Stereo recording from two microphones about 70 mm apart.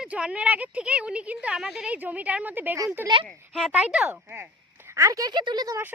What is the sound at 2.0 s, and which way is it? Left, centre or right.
A woman's voice, right.